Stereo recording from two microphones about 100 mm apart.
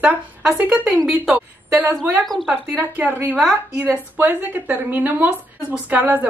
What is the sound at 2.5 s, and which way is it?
Speech, 15° right (ahead or behind).